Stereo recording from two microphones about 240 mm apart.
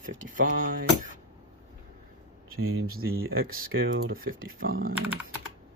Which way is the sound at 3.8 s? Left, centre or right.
Right.